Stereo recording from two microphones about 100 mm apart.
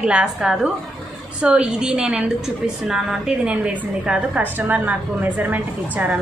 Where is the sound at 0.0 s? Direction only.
10° right (ahead or behind).